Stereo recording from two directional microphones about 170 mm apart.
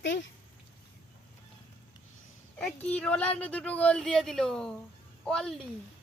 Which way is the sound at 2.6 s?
10° left (ahead or behind).